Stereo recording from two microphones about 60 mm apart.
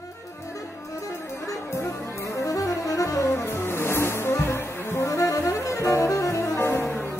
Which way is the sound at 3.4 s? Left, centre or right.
Left.